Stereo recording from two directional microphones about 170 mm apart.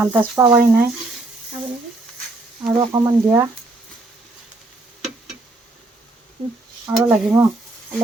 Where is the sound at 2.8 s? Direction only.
25° right (ahead or behind).